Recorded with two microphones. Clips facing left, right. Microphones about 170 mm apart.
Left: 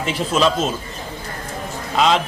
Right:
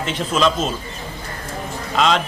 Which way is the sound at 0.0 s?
10° left (ahead or behind).